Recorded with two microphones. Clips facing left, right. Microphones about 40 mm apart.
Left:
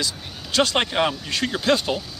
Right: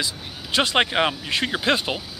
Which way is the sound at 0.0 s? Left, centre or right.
Right.